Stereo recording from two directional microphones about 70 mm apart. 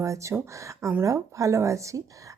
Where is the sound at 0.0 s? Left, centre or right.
Right.